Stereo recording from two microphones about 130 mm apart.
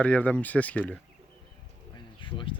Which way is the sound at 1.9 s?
40° left (ahead or behind).